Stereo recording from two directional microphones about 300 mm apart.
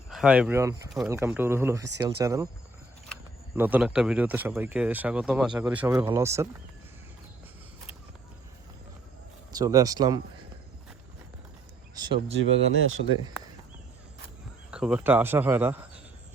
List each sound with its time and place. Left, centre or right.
0.1 s speech: centre
9.6 s speech: centre
11.9 s speech: centre
12.4 s speech: right
14.7 s speech: centre